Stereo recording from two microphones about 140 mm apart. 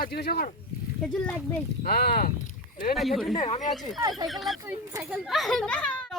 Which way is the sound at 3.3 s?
45° left (ahead or behind).